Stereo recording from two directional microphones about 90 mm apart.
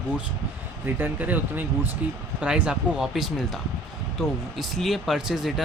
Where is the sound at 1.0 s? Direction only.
20° right (ahead or behind).